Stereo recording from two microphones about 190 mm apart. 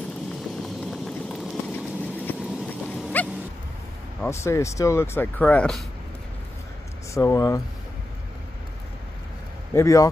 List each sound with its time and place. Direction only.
0.6 s vehicle: centre (ahead or behind)
2.2 s dog: centre (ahead or behind)
4.2 s speech: 15° left (ahead or behind)
7.2 s speech: 15° left (ahead or behind)
9.8 s speech: 15° left (ahead or behind)